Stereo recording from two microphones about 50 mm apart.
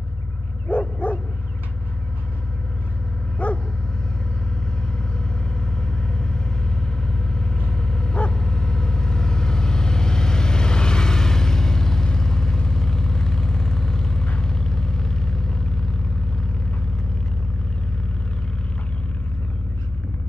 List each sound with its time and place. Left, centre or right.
0.7 s bow-wow: left
3.4 s dog: left
7.1 s vehicle: centre